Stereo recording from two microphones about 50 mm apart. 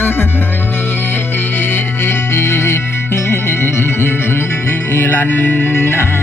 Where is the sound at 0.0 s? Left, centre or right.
Left.